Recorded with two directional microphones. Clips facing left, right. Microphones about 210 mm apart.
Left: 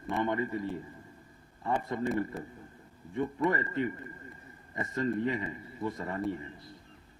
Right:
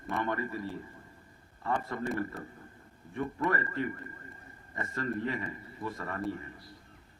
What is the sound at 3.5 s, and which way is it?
A man's voice, 20° left (ahead or behind).